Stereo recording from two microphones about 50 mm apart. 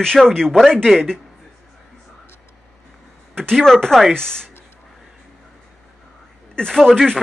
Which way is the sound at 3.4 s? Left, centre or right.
Centre.